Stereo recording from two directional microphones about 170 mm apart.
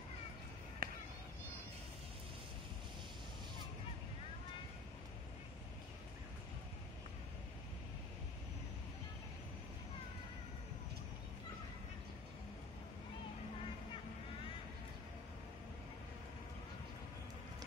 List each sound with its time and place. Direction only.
0.8 s chop: 60° right (ahead or behind)